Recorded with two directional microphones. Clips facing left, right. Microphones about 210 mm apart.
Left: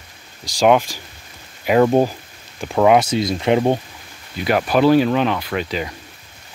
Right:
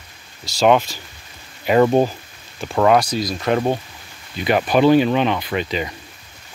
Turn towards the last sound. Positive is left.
turn(degrees=0)  # may be behind; listen again after turning